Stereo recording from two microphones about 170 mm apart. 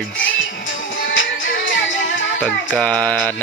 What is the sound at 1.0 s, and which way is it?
Music, 90° left.